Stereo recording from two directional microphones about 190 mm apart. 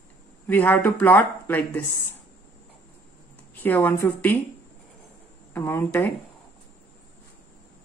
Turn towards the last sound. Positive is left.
turn(degrees=10)  # may be behind; listen again after turning